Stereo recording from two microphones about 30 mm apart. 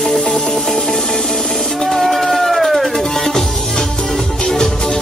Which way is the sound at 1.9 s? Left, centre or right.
Centre.